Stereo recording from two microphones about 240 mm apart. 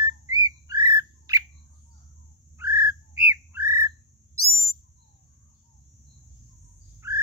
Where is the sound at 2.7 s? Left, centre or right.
Left.